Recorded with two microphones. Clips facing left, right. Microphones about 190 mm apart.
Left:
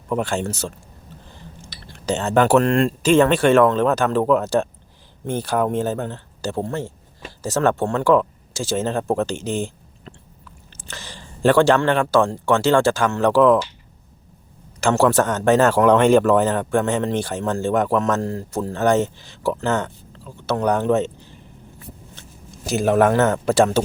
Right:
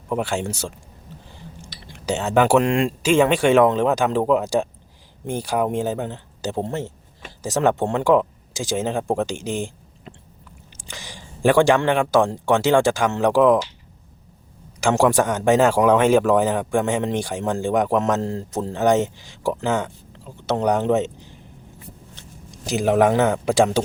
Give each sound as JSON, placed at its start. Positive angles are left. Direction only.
{"t": 0.1, "sound": "a man's voice", "side_deg": -10}
{"t": 1.8, "sound": "a man's voice", "side_deg": -10}
{"t": 14.8, "sound": "a man's voice", "side_deg": -15}